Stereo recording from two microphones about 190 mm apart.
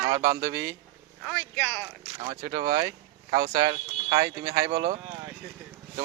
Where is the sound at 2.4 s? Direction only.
20° right (ahead or behind).